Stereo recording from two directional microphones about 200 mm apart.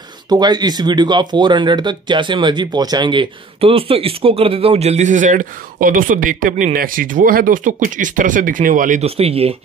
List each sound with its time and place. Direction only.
0.3 s speech: 20° right (ahead or behind)